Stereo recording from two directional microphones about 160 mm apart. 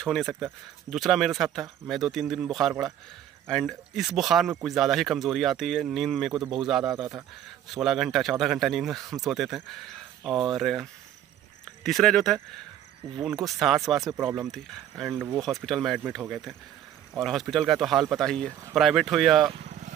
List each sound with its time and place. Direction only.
0.0 s speech: centre (ahead or behind)
13.4 s speech: centre (ahead or behind)
19.6 s vehicle: 50° right (ahead or behind)